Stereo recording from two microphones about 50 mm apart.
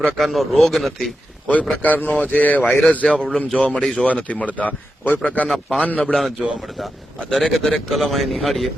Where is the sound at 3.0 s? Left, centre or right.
Centre.